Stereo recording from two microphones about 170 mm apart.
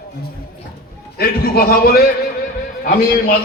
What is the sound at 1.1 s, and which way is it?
Speech, 65° left (ahead or behind).